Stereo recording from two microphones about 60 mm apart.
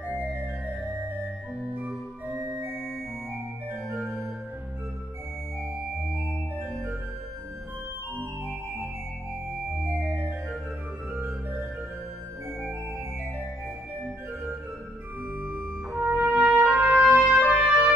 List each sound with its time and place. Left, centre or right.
1.7 s organ: right
2.3 s organ: right
2.7 s organ: centre
9.8 s organ: right
15.3 s trumpet: right